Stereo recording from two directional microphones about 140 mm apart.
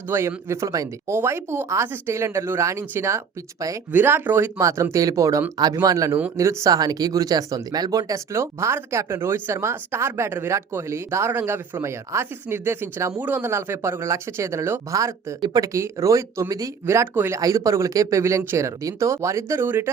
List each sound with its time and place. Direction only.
0.1 s speech: 20° right (ahead or behind)